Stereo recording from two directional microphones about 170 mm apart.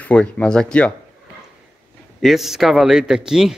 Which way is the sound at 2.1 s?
Centre (ahead or behind).